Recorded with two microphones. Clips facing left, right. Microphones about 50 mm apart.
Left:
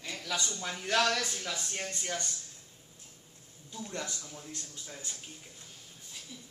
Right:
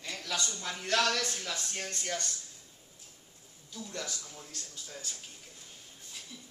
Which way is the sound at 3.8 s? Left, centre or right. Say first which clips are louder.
Left 1 dB; left.